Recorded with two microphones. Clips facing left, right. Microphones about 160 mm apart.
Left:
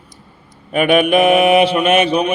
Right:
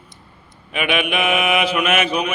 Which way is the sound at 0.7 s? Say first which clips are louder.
Left 9 dB; 45° left (ahead or behind).